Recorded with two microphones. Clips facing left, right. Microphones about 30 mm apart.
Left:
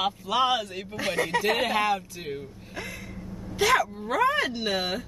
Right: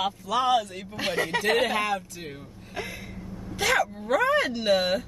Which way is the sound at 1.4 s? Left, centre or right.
Centre.